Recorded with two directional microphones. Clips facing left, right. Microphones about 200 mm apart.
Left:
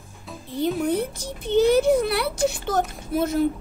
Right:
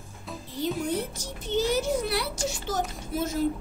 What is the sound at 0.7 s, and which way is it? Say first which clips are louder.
Speech: left 6 dB; 60° left (ahead or behind).